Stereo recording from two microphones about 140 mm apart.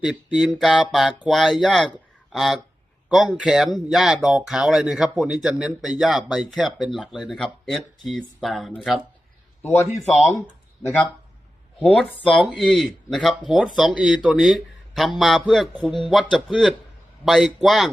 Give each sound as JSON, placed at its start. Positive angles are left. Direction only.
{"t": 0.0, "sound": "speech", "side_deg": -5}
{"t": 1.9, "sound": "a sound", "side_deg": 0}
{"t": 3.1, "sound": "speech", "side_deg": 0}
{"t": 9.6, "sound": "speech", "side_deg": 20}
{"t": 11.8, "sound": "speech", "side_deg": 10}